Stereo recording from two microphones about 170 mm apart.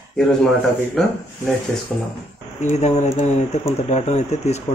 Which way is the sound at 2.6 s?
45° left (ahead or behind).